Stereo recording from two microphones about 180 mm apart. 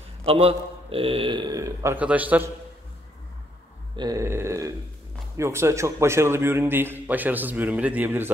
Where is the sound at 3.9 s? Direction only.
20° right (ahead or behind).